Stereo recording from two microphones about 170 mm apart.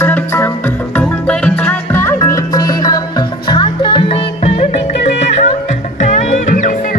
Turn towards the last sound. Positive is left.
turn(degrees=50)  # may be behind; listen again after turning